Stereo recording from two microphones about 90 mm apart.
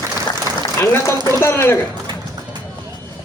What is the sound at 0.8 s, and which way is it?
Speech, 30° left (ahead or behind).